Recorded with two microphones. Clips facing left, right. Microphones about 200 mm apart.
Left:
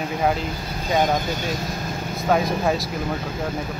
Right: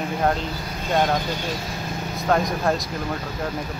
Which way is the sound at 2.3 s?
5° left (ahead or behind).